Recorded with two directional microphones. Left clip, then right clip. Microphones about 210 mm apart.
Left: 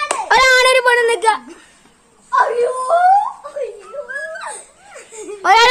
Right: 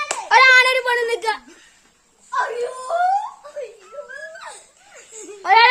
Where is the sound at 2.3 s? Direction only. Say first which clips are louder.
Left 8 dB; 20° left (ahead or behind).